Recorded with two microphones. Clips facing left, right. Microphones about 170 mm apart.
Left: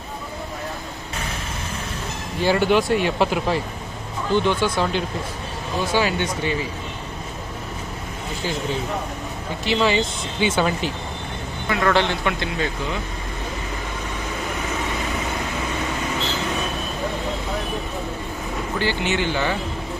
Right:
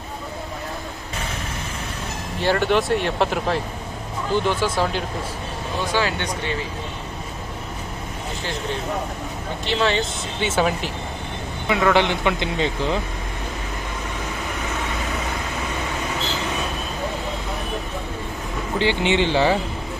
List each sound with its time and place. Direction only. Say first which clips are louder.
2.4 s speech: left 1 dB; 5° left (ahead or behind)
6.0 s speech: left 1 dB; 15° left (ahead or behind)
9.6 s speech: left 2 dB; 5° left (ahead or behind); by 13.0 s 25° right (ahead or behind)
18.8 s speech: right 4 dB; 25° right (ahead or behind)